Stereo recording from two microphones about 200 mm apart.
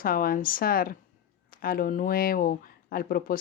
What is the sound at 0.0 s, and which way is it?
Speech, 45° left (ahead or behind).